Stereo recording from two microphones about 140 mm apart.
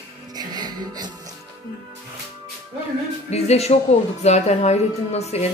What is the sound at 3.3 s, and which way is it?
Speech, 50° left (ahead or behind).